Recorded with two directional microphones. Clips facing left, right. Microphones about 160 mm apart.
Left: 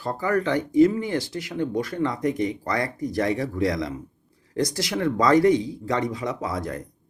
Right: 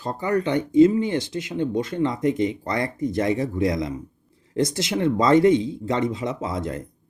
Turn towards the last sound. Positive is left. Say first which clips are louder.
# right 1 dB
turn(degrees=-25)  # may be behind; listen again after turning